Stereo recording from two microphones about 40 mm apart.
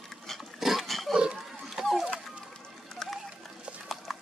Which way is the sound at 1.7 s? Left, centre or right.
Centre.